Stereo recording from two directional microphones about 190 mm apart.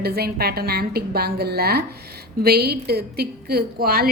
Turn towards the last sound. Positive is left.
turn(degrees=-50)  # may be behind; listen again after turning